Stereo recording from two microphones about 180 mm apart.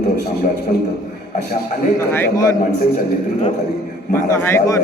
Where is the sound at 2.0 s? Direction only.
10° left (ahead or behind).